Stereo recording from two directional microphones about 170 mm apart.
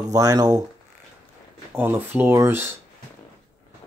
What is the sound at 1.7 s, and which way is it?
Speech, 15° right (ahead or behind).